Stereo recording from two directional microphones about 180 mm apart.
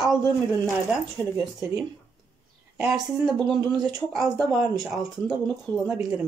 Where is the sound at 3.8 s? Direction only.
20° right (ahead or behind).